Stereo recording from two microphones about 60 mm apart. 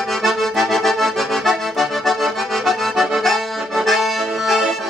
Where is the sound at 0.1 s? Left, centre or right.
Centre.